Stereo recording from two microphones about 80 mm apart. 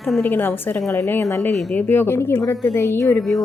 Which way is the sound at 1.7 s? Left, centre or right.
Left.